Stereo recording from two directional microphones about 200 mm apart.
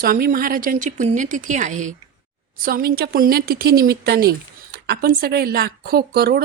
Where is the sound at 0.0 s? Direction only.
45° right (ahead or behind).